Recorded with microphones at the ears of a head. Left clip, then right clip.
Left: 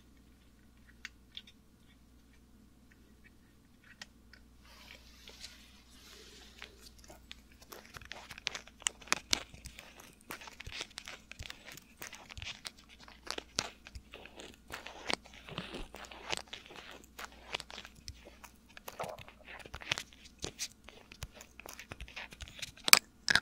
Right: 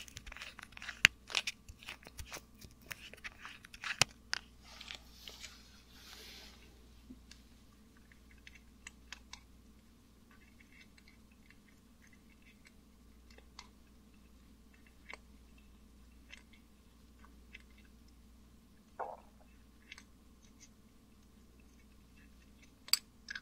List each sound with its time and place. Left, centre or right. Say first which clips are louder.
0.0 s crunch: right 17 dB; right
2.9 s a sound: right 18 dB; right
7.2 s crumpling: left 9 dB; left